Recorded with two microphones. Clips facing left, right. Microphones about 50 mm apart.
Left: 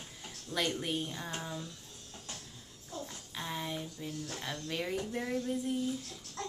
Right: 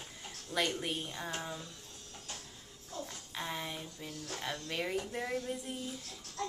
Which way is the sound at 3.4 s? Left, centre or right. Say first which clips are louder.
Left 1 dB; centre.